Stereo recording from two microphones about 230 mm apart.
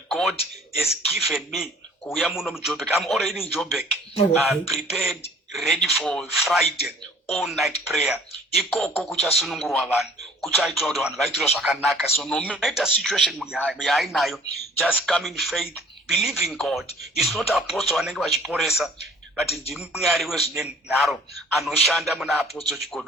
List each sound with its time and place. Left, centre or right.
0.1 s a sound: centre
1.1 s speech: centre
4.1 s speech: left
4.4 s speech: centre